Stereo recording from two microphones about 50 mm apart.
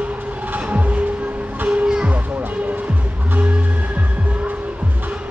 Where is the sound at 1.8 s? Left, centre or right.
Centre.